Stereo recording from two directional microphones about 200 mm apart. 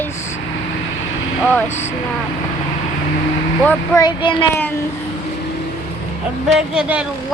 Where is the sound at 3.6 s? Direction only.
10° left (ahead or behind).